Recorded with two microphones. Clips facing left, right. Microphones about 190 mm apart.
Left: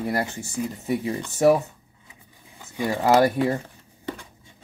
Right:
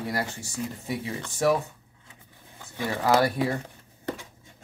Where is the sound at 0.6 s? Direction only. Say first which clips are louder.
Left 4 dB; 10° left (ahead or behind).